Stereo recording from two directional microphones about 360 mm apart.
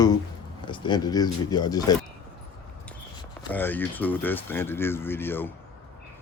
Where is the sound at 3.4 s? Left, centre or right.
Centre.